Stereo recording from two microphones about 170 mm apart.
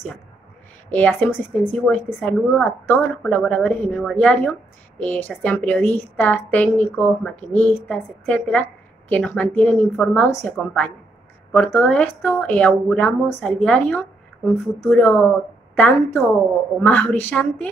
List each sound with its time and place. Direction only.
0.8 s a woman's voice: 10° left (ahead or behind)